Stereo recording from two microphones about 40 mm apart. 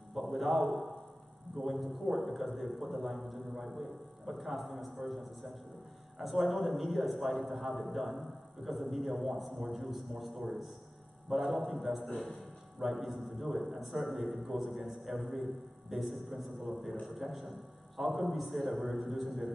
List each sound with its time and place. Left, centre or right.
0.1 s a man's voice: centre